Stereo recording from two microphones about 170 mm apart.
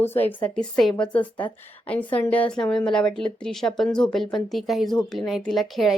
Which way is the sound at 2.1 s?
10° left (ahead or behind).